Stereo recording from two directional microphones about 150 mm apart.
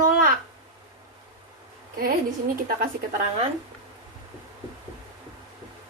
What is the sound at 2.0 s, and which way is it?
Speech, 75° right (ahead or behind).